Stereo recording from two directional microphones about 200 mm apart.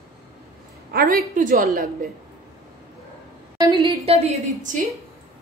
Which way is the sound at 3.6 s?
25° right (ahead or behind).